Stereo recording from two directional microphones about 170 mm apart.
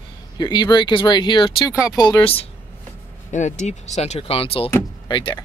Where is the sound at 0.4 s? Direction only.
25° left (ahead or behind).